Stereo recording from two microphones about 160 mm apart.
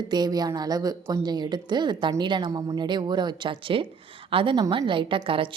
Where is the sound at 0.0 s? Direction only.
25° right (ahead or behind).